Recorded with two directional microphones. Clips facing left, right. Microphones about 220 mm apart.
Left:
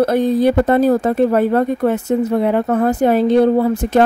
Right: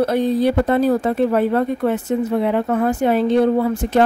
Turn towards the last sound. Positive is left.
turn(degrees=35)  # may be behind; listen again after turning